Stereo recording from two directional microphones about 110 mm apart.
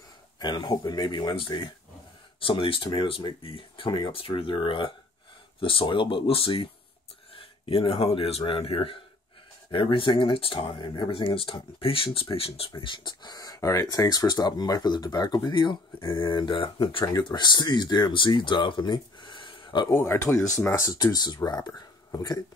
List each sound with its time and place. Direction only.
0.4 s speech: 40° left (ahead or behind)
17.0 s speech: 35° left (ahead or behind)
19.9 s speech: 25° left (ahead or behind); by 22.4 s 40° left (ahead or behind)